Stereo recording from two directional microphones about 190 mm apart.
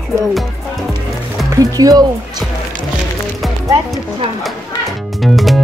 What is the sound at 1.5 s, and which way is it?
Speech, 20° right (ahead or behind).